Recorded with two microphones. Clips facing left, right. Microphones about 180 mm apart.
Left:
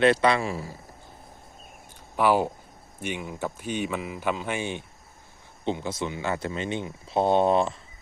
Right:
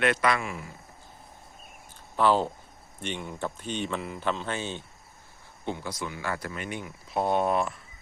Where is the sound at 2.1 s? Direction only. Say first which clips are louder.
Left 1 dB; 10° left (ahead or behind).